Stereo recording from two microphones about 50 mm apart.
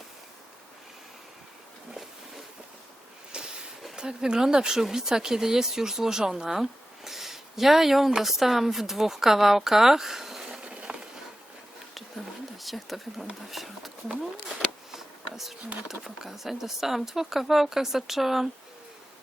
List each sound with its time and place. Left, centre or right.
3.3 s train: centre
3.9 s speech: centre
10.6 s a sound: right
12.5 s speech: centre
14.9 s a sound: centre
15.9 s speech: centre